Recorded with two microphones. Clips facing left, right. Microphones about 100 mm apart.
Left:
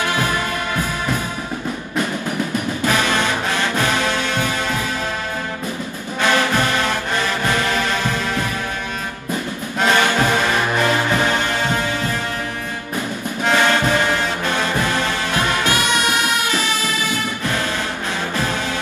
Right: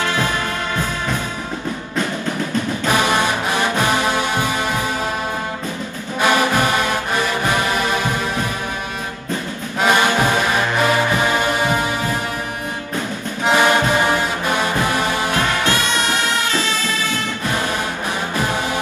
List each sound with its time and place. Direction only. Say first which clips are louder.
2.8 s music: right 1 dB; 20° right (ahead or behind)
6.2 s music: right 1 dB; 15° right (ahead or behind)
9.8 s music: right 1 dB; 15° right (ahead or behind)
13.5 s music: right 2 dB; 15° right (ahead or behind)
15.6 s music: even; 15° left (ahead or behind)